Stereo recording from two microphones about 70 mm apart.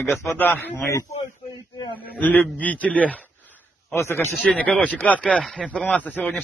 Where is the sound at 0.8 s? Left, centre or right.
Left.